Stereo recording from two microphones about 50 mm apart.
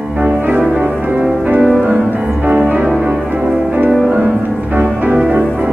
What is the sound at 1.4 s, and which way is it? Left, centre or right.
Music, right.